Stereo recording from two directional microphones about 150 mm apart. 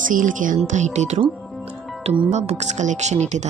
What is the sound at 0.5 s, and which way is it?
Speech, 50° right (ahead or behind).